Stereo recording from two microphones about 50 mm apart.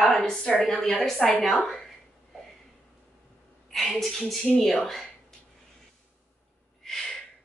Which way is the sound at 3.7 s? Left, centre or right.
Centre.